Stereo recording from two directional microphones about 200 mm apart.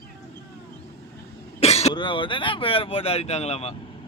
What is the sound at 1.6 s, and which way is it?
Speech, 30° left (ahead or behind).